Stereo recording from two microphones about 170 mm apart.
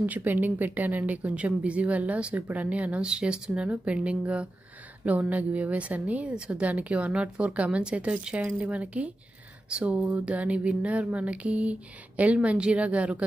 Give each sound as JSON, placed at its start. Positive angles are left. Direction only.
{"t": 0.0, "sound": "speech", "side_deg": -10}